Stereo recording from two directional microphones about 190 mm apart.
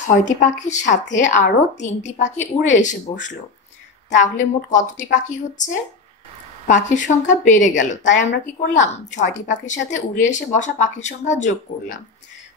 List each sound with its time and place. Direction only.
0.0 s speech: 40° left (ahead or behind)
4.1 s speech: 40° left (ahead or behind)